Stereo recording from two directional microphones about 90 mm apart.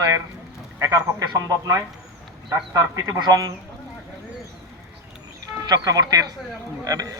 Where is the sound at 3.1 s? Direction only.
45° right (ahead or behind).